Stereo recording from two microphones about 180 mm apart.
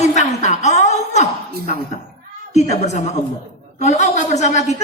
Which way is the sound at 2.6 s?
40° left (ahead or behind).